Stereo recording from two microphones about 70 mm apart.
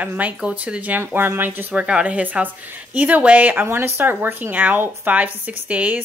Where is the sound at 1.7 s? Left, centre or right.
Centre.